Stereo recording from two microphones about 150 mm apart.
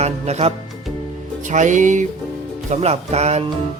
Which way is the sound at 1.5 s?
55° right (ahead or behind).